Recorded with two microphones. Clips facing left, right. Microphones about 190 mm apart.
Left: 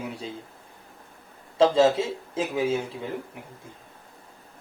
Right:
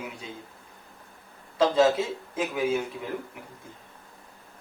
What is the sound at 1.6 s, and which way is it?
Speech, 25° left (ahead or behind).